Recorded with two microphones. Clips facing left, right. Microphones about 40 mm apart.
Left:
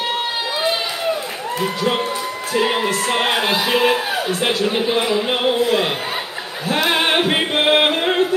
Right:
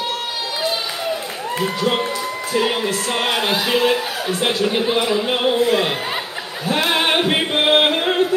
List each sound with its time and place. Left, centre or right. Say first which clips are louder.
2.5 s speech: left 1 dB; centre
2.8 s speech: left 2 dB; centre
5.0 s speech: even; centre
6.9 s a capella: left 1 dB; centre